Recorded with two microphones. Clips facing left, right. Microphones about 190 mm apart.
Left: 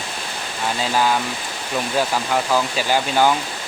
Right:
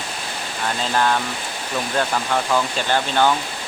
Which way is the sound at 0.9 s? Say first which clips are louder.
Even; 5° left (ahead or behind).